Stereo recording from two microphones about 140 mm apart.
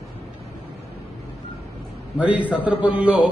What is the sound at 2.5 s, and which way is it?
Speech, 10° right (ahead or behind).